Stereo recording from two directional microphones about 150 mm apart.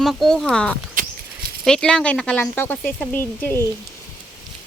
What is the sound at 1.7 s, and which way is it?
Speech, 5° left (ahead or behind).